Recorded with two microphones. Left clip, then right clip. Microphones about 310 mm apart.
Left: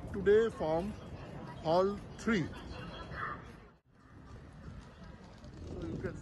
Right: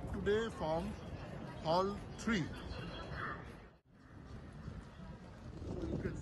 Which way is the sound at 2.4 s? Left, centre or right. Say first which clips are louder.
Left 2 dB; left.